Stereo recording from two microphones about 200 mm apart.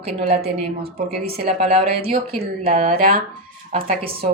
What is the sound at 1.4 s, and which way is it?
A woman's voice, 50° right (ahead or behind).